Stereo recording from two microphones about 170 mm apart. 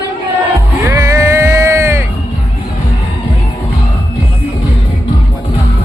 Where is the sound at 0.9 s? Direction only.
15° right (ahead or behind).